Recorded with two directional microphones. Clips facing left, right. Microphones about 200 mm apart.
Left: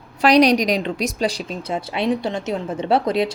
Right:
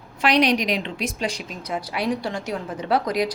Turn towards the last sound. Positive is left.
turn(degrees=25)  # may be behind; listen again after turning